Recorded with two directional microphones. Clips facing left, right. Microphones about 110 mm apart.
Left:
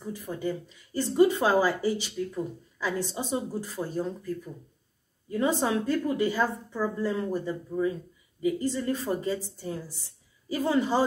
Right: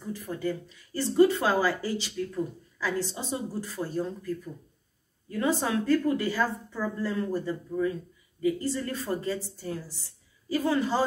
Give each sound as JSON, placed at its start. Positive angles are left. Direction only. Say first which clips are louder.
{"t": 0.1, "sound": "speech", "louder": "even", "side_deg": 15}
{"t": 5.3, "sound": "speech", "louder": "left 1 dB", "side_deg": 15}